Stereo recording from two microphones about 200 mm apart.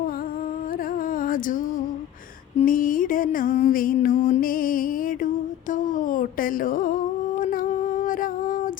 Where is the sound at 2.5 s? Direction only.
45° left (ahead or behind).